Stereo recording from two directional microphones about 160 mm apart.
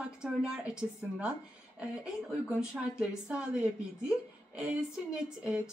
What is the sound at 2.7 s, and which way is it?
Speech, 5° right (ahead or behind).